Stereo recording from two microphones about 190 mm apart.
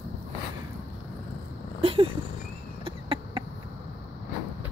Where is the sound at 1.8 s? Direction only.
30° right (ahead or behind).